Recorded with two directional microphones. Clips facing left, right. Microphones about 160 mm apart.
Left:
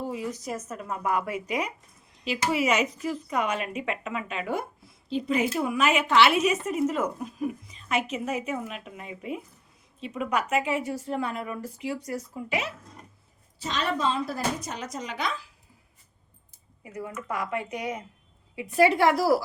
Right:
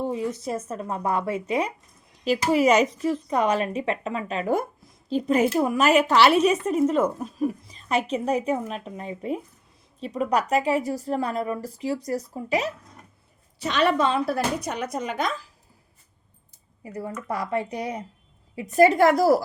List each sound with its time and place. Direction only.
0.0 s a woman's voice: 30° right (ahead or behind)
2.2 s speech: 40° right (ahead or behind)
13.6 s speech: 65° right (ahead or behind); by 15.4 s 45° right (ahead or behind)
16.8 s a woman's voice: 35° right (ahead or behind)